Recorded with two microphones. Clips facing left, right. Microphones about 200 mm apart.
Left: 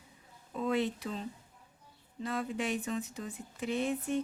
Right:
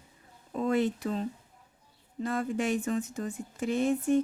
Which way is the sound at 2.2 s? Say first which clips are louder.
Right 5 dB; 45° right (ahead or behind).